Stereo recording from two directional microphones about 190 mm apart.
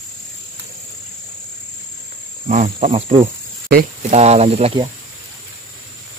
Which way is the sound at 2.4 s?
40° right (ahead or behind).